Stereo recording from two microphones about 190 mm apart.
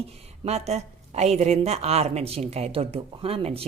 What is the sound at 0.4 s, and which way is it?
Speech, 35° right (ahead or behind).